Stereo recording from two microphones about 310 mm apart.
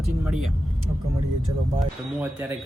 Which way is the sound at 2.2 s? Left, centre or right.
Centre.